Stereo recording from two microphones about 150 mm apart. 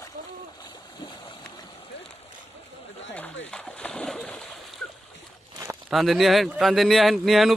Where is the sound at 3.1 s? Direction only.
10° left (ahead or behind).